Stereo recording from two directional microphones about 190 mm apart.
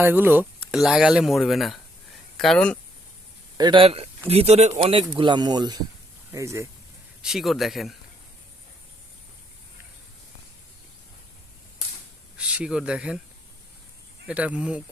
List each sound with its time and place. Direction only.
0.0 s speech: 10° right (ahead or behind)
3.6 s speech: 25° right (ahead or behind)
7.2 s speech: centre (ahead or behind)
12.4 s speech: 5° right (ahead or behind)
14.3 s speech: 5° right (ahead or behind)